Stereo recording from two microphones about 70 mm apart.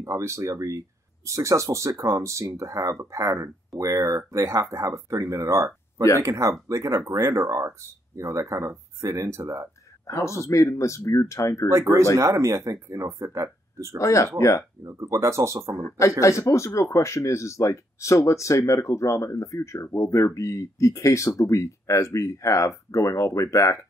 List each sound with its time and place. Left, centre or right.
0.0 s speech: right
10.0 s speech: left
11.7 s speech: right
13.9 s speech: left
14.8 s speech: right
15.8 s speech: left